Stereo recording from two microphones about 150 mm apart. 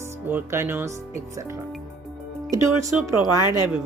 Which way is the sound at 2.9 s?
10° right (ahead or behind).